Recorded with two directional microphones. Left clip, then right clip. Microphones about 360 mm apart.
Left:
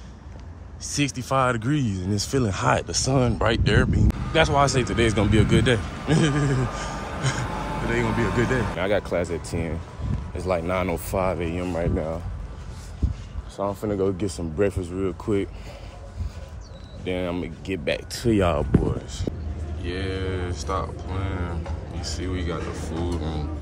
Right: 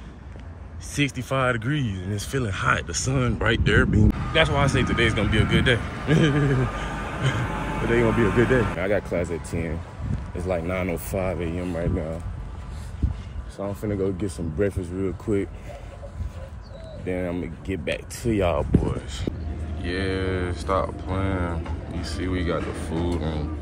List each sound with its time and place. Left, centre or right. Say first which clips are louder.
0.9 s speech: left 2 dB; centre
6.6 s a sound: right 1 dB; left
8.1 s speech: right 3 dB; left
8.7 s speech: left 1 dB; centre
13.6 s speech: left 3 dB; centre
17.0 s speech: left 1 dB; centre; by 18.8 s left
18.9 s speech: even; centre